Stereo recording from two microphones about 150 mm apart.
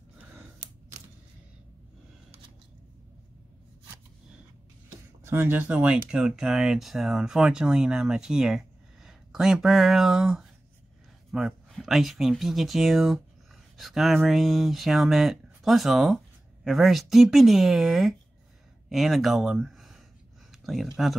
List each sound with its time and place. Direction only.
5.2 s speech: 15° right (ahead or behind)